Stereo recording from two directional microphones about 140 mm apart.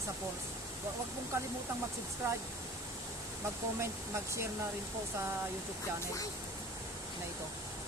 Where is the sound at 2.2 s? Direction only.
20° right (ahead or behind).